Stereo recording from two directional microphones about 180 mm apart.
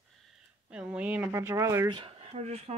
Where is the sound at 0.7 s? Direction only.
5° right (ahead or behind); by 2.8 s 35° right (ahead or behind).